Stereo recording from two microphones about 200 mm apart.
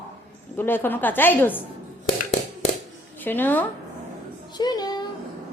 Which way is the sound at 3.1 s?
10° left (ahead or behind).